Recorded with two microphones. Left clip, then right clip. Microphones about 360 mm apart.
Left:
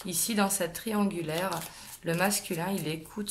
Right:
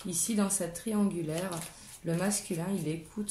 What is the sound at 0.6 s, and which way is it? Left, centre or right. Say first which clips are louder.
Speech: left 3 dB; left.